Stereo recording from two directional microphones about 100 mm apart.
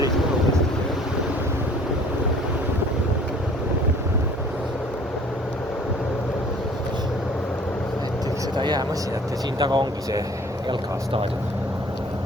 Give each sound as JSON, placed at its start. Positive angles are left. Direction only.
{"t": 8.5, "sound": "a sound", "side_deg": -50}
{"t": 9.6, "sound": "speech", "side_deg": -45}
{"t": 10.7, "sound": "speech", "side_deg": -65}